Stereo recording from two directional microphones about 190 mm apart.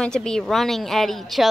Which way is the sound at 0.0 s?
5° left (ahead or behind).